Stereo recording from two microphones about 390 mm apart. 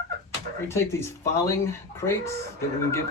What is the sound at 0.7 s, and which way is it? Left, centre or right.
Speech, centre.